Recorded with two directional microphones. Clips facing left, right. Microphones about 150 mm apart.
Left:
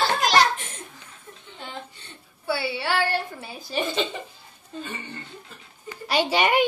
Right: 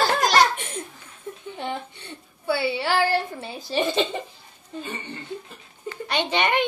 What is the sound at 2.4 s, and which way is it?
A woman's voice, 20° right (ahead or behind).